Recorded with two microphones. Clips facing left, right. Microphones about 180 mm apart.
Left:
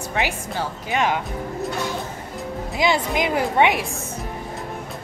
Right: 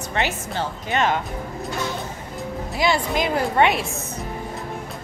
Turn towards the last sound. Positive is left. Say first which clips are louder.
# even
turn(degrees=15)  # may be behind; listen again after turning